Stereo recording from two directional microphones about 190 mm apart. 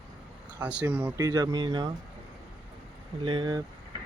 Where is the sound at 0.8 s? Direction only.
10° right (ahead or behind).